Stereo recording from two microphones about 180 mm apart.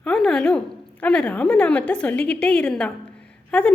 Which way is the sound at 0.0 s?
5° left (ahead or behind).